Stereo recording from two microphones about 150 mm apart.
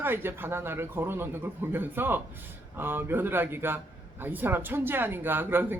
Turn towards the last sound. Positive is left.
turn(degrees=-15)  # may be behind; listen again after turning